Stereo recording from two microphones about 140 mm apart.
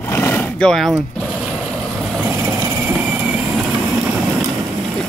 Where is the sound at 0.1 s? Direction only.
15° left (ahead or behind).